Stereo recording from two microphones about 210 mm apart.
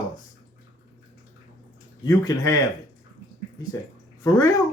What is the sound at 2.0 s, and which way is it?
Speech, 15° left (ahead or behind).